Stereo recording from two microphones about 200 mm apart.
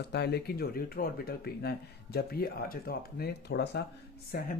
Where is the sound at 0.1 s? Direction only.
55° left (ahead or behind).